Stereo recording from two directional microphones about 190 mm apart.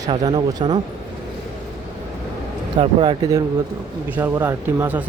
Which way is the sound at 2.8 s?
25° right (ahead or behind).